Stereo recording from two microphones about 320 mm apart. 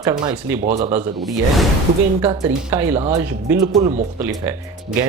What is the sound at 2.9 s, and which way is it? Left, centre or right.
Speech, centre.